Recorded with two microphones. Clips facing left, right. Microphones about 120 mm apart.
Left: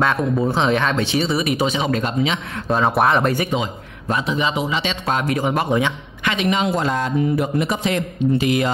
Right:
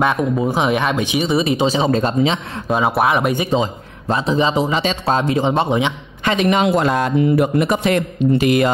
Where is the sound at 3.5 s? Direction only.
30° right (ahead or behind).